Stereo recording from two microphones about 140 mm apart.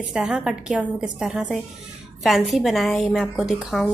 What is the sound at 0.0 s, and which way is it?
A woman's voice, 5° right (ahead or behind).